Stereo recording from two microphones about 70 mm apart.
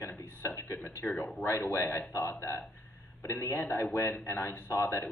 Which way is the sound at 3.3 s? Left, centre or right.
Left.